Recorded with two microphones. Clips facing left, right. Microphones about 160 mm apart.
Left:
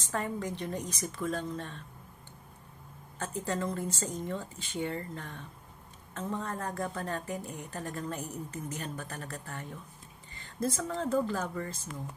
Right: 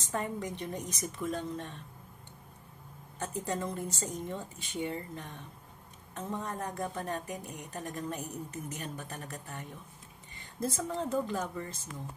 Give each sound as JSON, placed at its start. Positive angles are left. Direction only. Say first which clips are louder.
{"t": 0.1, "sound": "a woman's voice", "louder": "left 1 dB", "side_deg": -20}
{"t": 3.2, "sound": "a woman's voice", "louder": "left 1 dB", "side_deg": -15}